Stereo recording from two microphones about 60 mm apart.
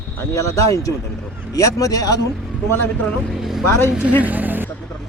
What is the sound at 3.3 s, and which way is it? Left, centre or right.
Speech, centre.